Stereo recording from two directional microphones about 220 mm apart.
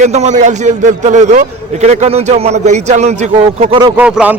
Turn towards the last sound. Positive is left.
turn(degrees=-5)  # may be behind; listen again after turning